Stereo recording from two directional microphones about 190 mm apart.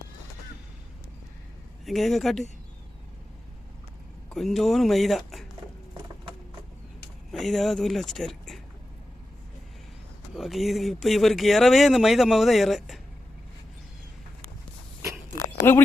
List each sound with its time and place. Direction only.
1.8 s speech: centre (ahead or behind)
4.4 s speech: centre (ahead or behind)
7.3 s speech: centre (ahead or behind)
10.3 s speech: centre (ahead or behind)